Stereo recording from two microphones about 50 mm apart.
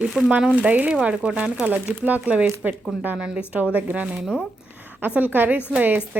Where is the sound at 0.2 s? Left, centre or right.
Right.